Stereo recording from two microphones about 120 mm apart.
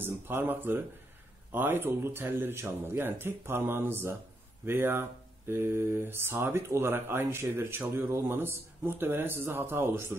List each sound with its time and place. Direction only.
0.0 s speech: 15° right (ahead or behind)